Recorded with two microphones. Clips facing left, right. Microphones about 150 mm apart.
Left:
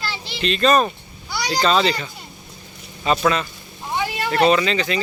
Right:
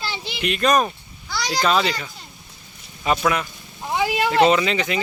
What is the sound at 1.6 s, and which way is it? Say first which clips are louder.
Speech: left 2 dB; 5° right (ahead or behind).